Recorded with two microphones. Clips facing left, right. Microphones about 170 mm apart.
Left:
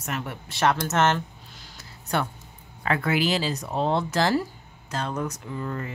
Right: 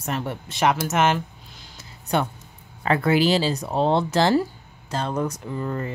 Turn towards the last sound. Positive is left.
turn(degrees=-35)  # may be behind; listen again after turning